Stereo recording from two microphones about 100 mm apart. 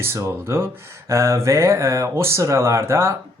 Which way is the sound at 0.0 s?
25° right (ahead or behind).